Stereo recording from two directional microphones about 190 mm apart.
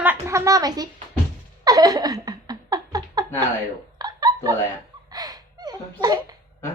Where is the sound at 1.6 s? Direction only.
20° right (ahead or behind).